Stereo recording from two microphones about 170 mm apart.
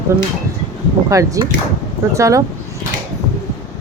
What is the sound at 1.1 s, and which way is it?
Speech, 20° right (ahead or behind).